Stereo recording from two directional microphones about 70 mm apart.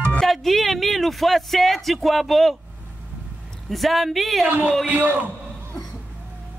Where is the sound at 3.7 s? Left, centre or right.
Centre.